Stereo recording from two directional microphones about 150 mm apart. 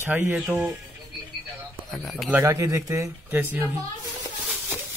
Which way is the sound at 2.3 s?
20° right (ahead or behind).